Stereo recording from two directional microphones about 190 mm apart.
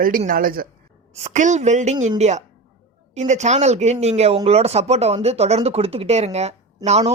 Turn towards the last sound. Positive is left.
turn(degrees=-35)  # may be behind; listen again after turning